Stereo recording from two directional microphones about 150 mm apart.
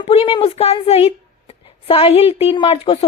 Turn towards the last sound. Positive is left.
turn(degrees=40)  # may be behind; listen again after turning